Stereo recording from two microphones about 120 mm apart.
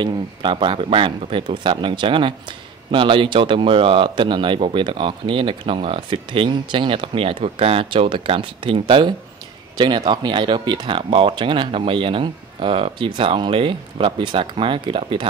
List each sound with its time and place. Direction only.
0.0 s speech: 40° right (ahead or behind)